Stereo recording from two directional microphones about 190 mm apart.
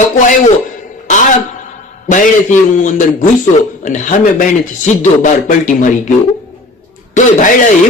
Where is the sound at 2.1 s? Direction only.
40° left (ahead or behind).